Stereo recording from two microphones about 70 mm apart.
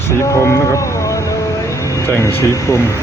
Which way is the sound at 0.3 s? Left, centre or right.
Left.